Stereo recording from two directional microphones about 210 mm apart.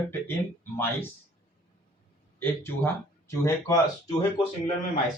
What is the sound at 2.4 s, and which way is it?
Speech, 10° left (ahead or behind).